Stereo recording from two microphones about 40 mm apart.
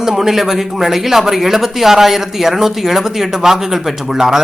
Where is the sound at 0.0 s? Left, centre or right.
Centre.